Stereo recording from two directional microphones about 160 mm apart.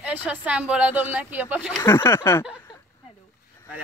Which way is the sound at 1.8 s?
15° left (ahead or behind).